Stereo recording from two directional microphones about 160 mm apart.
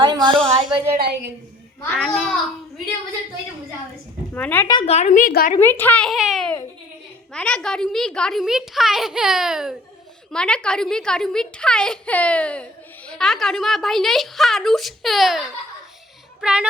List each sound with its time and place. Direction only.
0.0 s a sound: 30° right (ahead or behind)
0.9 s a woman's voice: 90° right
1.8 s a child's voice: 5° left (ahead or behind)
4.4 s speech: 10° left (ahead or behind)
4.9 s speech: 45° left (ahead or behind)
5.5 s a child's voice: 15° left (ahead or behind); by 16.6 s 5° right (ahead or behind)